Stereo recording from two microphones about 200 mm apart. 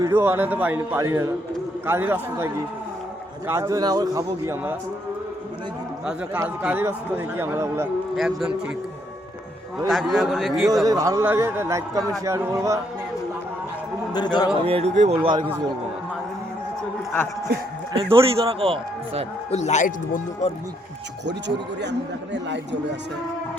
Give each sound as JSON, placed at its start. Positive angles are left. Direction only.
{"t": 0.0, "sound": "a man's voice", "side_deg": -10}
{"t": 6.1, "sound": "a man's voice", "side_deg": -5}
{"t": 8.1, "sound": "a man's voice", "side_deg": 0}
{"t": 9.7, "sound": "a man's voice", "side_deg": 0}
{"t": 10.8, "sound": "a man's voice", "side_deg": -15}
{"t": 14.1, "sound": "speech", "side_deg": 20}
{"t": 14.7, "sound": "a man's voice", "side_deg": -30}
{"t": 17.9, "sound": "a man's voice", "side_deg": -25}
{"t": 19.5, "sound": "speech", "side_deg": 35}
{"t": 21.4, "sound": "speech", "side_deg": -60}